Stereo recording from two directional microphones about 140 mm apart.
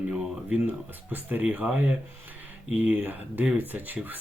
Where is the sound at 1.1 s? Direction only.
10° right (ahead or behind).